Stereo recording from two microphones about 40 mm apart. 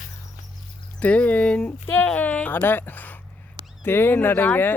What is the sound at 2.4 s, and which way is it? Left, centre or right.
Speech, left.